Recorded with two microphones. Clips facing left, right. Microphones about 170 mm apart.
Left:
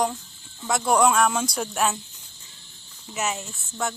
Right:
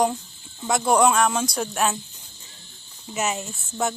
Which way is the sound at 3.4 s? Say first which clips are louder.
Right 4 dB; 15° right (ahead or behind).